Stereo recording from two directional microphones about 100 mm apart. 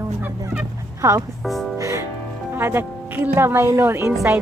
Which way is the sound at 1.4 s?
Centre (ahead or behind).